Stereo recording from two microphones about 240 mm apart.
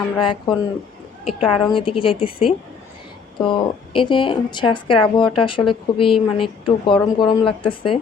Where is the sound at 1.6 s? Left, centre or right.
Left.